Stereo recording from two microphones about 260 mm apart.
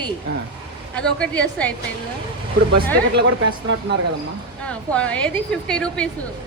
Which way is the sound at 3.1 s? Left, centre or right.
Right.